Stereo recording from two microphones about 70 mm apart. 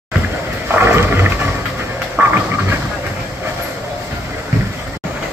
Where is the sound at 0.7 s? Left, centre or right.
Right.